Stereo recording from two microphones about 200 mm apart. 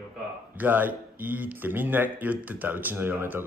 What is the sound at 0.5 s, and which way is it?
Speech, 10° right (ahead or behind).